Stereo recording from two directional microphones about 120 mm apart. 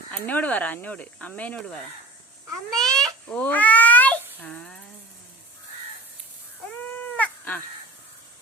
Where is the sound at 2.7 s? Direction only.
5° left (ahead or behind).